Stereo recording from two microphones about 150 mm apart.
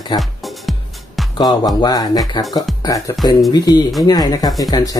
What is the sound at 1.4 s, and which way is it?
Speech, 25° left (ahead or behind).